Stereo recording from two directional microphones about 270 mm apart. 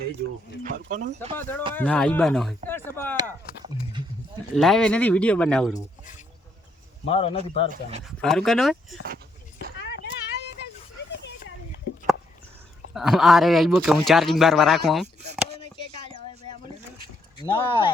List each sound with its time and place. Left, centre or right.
0.6 s speech: right
1.4 s speech: centre
4.5 s speech: centre
7.0 s speech: left
7.7 s speech: right
8.0 s speech: centre
9.8 s vehicle: left
12.9 s speech: centre
15.4 s a sound: centre
16.0 s a sound: right
17.3 s speech: centre